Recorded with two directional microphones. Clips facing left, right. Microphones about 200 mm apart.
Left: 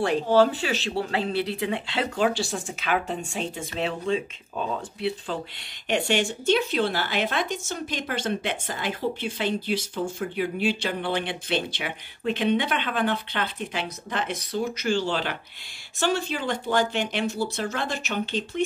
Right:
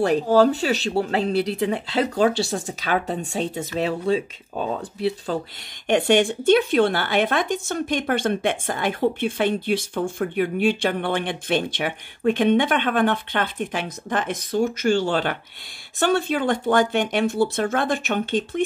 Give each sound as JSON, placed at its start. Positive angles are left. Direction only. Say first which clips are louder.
{"t": 0.0, "sound": "speech", "louder": "right 3 dB", "side_deg": -40}
{"t": 5.9, "sound": "speech", "louder": "right 6 dB", "side_deg": -55}